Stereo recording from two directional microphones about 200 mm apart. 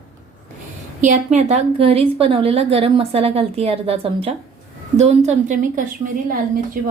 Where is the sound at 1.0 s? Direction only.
35° right (ahead or behind).